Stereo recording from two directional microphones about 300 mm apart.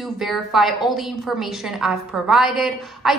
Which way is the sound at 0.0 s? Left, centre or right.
Centre.